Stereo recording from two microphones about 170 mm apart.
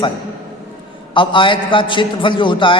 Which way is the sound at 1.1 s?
30° left (ahead or behind).